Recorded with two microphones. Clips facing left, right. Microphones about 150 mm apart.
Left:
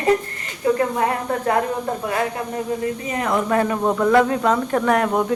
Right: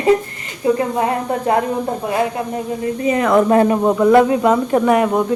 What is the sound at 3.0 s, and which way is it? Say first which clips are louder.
Speech: right 10 dB; 90° right.